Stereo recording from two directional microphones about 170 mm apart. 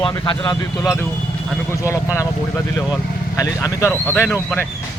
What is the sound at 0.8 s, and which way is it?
Speech, 15° left (ahead or behind).